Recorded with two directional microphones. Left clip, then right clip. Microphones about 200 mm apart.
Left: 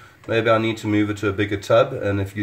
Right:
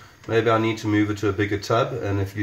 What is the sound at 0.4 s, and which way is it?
Speech, 30° left (ahead or behind).